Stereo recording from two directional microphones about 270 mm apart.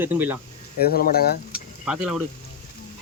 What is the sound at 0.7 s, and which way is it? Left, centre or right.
Speech, left.